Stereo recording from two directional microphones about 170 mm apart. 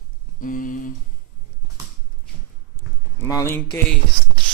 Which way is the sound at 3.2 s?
15° left (ahead or behind).